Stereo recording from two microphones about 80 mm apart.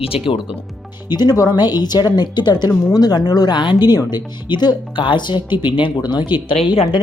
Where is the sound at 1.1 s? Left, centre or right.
Left.